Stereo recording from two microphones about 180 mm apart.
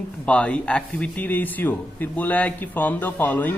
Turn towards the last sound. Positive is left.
turn(degrees=10)  # may be behind; listen again after turning